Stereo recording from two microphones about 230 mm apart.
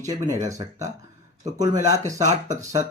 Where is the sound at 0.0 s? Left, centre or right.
Centre.